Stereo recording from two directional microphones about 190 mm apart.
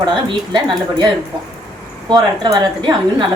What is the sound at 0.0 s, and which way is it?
A woman's voice, 25° right (ahead or behind).